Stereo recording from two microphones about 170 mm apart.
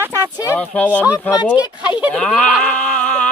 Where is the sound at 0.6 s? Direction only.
10° left (ahead or behind).